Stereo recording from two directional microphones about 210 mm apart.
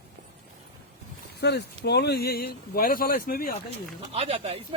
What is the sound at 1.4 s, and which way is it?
Speech, 50° left (ahead or behind).